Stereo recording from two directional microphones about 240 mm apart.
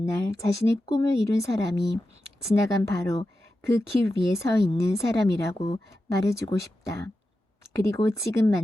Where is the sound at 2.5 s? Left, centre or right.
Centre.